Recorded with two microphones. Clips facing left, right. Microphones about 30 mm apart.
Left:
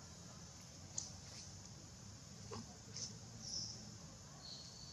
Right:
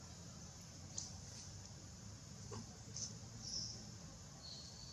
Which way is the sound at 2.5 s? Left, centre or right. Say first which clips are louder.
Left 1 dB; left.